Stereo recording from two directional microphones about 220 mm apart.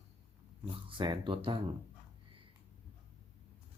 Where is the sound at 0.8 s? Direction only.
20° right (ahead or behind).